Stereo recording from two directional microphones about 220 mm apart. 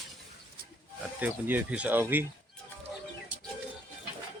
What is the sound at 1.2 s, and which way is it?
Speech, 5° right (ahead or behind).